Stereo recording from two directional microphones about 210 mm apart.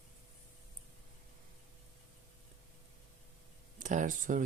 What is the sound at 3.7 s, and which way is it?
Speech, 35° right (ahead or behind).